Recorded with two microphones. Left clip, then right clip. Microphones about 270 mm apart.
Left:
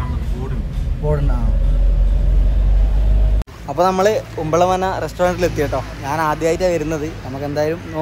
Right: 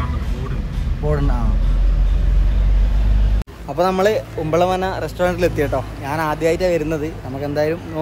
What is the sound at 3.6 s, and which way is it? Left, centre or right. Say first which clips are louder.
Speech: left 2 dB; centre.